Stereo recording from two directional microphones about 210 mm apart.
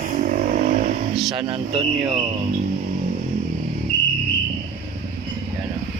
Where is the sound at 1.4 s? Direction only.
25° right (ahead or behind).